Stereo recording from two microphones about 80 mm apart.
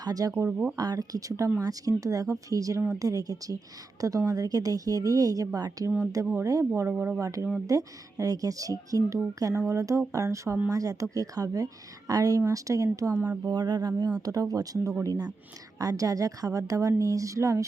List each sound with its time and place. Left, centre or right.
0.0 s speech: right
13.1 s speech: right
13.5 s speech: right